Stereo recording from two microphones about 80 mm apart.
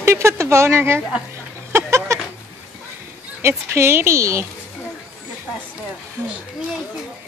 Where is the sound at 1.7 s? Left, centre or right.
Right.